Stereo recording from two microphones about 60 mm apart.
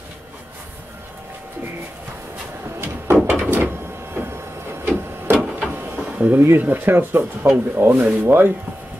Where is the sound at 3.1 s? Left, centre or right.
Right.